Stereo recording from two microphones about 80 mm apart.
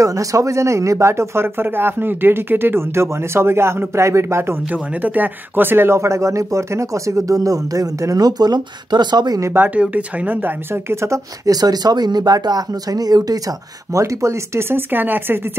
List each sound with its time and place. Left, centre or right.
0.0 s speech: right
5.0 s speech: right
9.5 s speech: right
10.7 s speech: right
13.9 s speech: right